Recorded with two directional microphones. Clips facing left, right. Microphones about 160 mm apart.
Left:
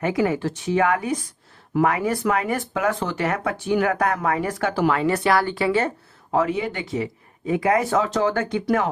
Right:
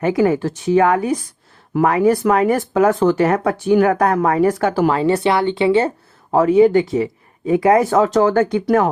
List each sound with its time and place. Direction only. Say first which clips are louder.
0.0 s speech: right 6 dB; 40° right (ahead or behind)
4.9 s speech: right 4 dB; 30° right (ahead or behind)
6.3 s speech: right 11 dB; 40° right (ahead or behind)